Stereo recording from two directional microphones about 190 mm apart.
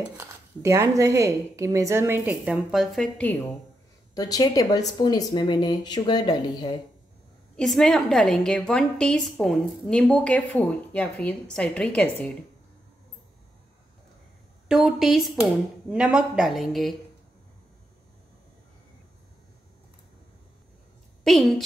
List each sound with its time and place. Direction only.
0.2 s a woman's voice: 15° right (ahead or behind); by 3.3 s 5° left (ahead or behind)
4.1 s speech: 20° left (ahead or behind)
7.5 s a woman's voice: centre (ahead or behind)
14.7 s a woman's voice: centre (ahead or behind)
21.2 s a woman's voice: centre (ahead or behind)